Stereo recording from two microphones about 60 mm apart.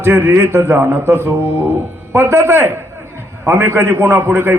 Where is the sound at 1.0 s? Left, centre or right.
Right.